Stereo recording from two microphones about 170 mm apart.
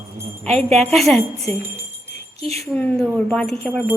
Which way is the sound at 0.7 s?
Centre (ahead or behind).